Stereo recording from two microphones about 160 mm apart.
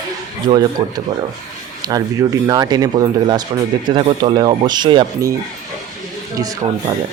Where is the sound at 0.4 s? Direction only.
25° right (ahead or behind).